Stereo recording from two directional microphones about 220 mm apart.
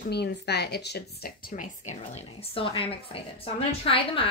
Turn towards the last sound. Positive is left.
turn(degrees=25)  # may be behind; listen again after turning